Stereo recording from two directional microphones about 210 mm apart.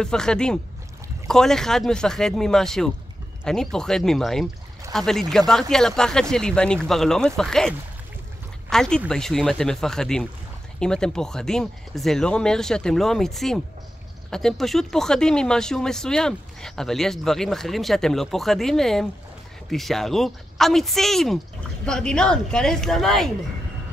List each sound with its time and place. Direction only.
0.0 s speech: 5° left (ahead or behind)